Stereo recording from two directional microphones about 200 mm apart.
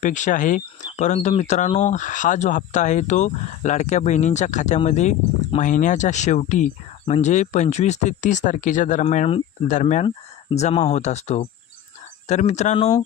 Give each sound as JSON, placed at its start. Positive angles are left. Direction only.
{"t": 0.0, "sound": "speech", "side_deg": 40}